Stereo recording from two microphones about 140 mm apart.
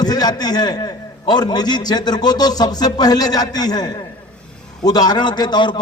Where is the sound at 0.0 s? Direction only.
30° left (ahead or behind).